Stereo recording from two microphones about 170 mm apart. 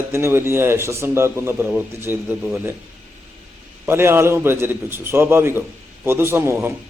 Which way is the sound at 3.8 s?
15° right (ahead or behind).